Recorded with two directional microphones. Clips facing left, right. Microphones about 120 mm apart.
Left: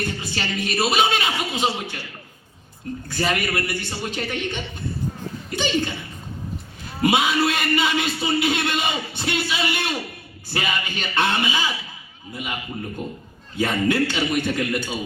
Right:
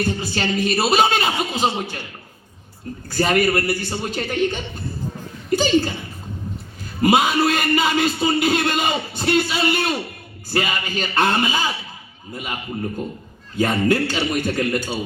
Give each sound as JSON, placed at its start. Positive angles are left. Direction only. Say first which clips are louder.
{"t": 0.1, "sound": "speech", "louder": "right 5 dB", "side_deg": -40}
{"t": 3.1, "sound": "speech", "louder": "right 6 dB", "side_deg": -40}
{"t": 7.0, "sound": "speech", "louder": "right 3 dB", "side_deg": -40}
{"t": 13.6, "sound": "a man's voice", "louder": "right 2 dB", "side_deg": -45}